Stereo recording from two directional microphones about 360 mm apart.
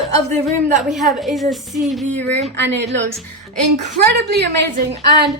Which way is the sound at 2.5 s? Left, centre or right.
Right.